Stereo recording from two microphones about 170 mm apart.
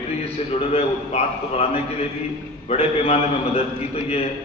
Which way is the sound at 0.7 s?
40° left (ahead or behind).